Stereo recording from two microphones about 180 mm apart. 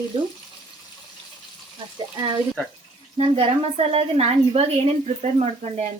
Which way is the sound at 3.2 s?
35° right (ahead or behind).